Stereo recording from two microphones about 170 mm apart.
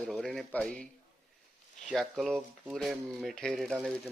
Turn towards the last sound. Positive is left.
turn(degrees=0)  # may be behind; listen again after turning